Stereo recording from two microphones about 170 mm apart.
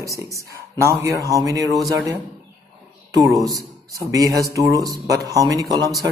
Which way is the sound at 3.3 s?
20° right (ahead or behind).